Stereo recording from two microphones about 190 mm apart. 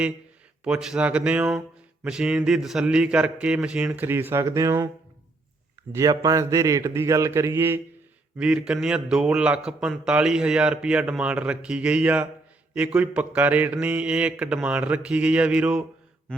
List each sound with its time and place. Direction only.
0.6 s a man's voice: 5° right (ahead or behind)
5.9 s mantra: 15° right (ahead or behind)
8.4 s a man's voice: 5° right (ahead or behind)
12.7 s mantra: 5° right (ahead or behind)